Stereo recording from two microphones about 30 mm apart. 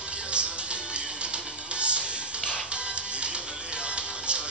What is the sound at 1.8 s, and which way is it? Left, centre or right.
Music, right.